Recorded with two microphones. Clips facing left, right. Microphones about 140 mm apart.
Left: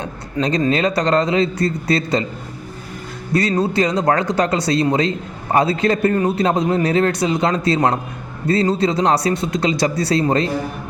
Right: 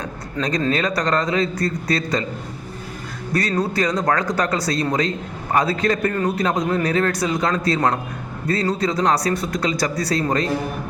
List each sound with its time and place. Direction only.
0.4 s a man's voice: 10° left (ahead or behind)
0.7 s a man's voice: 25° left (ahead or behind)
3.6 s a man's voice: 25° left (ahead or behind)